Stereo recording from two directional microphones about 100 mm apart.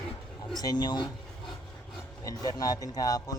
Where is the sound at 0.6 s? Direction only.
45° left (ahead or behind).